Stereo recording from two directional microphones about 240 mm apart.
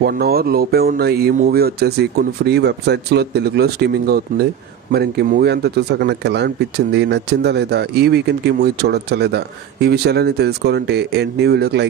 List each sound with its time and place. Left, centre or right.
0.0 s speech: right